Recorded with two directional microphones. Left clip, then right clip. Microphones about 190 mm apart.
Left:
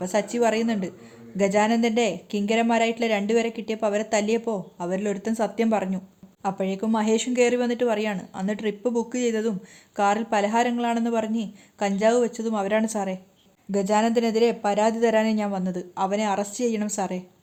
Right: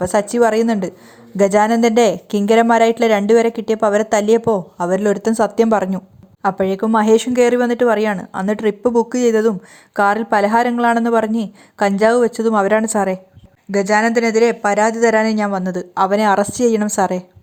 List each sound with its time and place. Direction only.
0.0 s a woman's voice: 30° right (ahead or behind)
13.7 s speech: 15° right (ahead or behind); by 17.2 s 35° right (ahead or behind)